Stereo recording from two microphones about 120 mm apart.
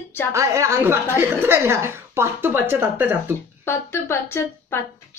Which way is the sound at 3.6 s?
20° left (ahead or behind).